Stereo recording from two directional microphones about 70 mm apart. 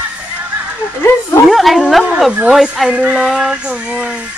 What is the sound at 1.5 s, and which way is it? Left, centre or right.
A woman's voice, centre.